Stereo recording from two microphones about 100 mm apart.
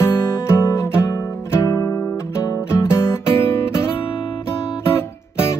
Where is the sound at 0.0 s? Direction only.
25° left (ahead or behind).